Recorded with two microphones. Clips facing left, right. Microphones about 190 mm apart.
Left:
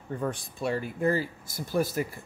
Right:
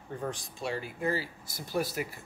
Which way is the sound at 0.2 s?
55° left (ahead or behind).